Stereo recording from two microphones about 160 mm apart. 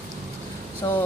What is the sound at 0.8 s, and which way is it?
Speech, 25° left (ahead or behind).